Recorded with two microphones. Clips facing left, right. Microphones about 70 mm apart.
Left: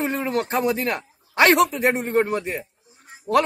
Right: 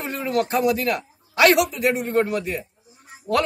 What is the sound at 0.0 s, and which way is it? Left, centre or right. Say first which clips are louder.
A man's voice: even; left.